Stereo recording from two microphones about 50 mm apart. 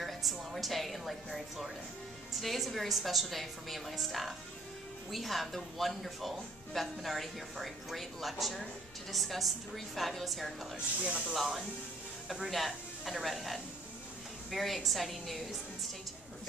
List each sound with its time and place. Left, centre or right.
0.0 s a woman's voice: centre
11.0 s speech: right
11.3 s speech: centre